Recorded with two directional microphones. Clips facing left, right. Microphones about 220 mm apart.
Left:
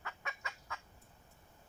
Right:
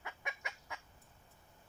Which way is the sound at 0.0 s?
15° right (ahead or behind).